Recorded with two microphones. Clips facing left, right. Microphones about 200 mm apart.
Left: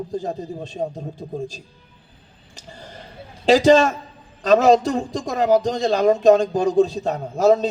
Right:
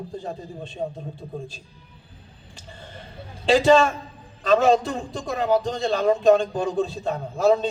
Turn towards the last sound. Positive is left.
turn(degrees=40)  # may be behind; listen again after turning